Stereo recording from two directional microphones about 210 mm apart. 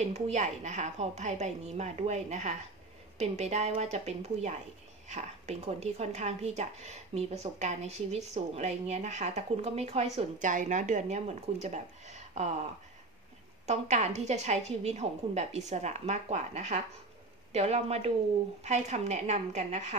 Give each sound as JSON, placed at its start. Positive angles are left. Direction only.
{"t": 0.0, "sound": "speech", "side_deg": -30}
{"t": 13.7, "sound": "speech", "side_deg": -35}